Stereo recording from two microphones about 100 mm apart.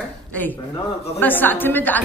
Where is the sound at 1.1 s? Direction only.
20° left (ahead or behind).